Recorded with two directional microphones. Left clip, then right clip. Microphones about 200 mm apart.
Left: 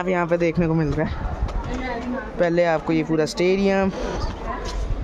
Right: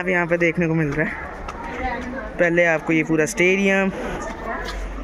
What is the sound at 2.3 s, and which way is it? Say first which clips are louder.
Speech: right 2 dB; centre (ahead or behind).